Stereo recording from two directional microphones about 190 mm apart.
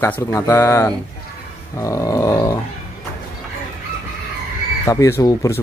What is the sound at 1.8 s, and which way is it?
Dog, 15° left (ahead or behind).